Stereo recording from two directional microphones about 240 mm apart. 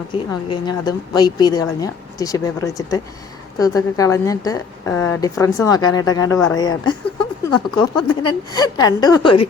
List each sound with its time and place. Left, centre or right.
0.1 s a woman's voice: centre